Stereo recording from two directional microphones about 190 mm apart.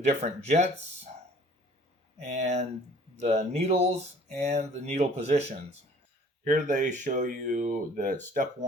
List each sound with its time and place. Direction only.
0.0 s speech: 35° right (ahead or behind)
2.3 s speech: 35° right (ahead or behind)
6.4 s speech: 45° right (ahead or behind)